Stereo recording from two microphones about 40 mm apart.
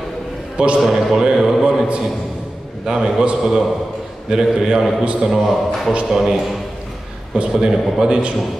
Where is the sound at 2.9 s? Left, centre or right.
Centre; by 5.3 s right.